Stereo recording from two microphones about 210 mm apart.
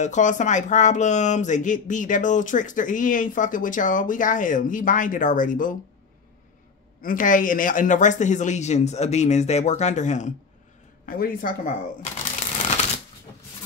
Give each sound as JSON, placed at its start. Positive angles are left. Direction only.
{"t": 0.0, "sound": "speech", "side_deg": 35}
{"t": 7.0, "sound": "speech", "side_deg": 40}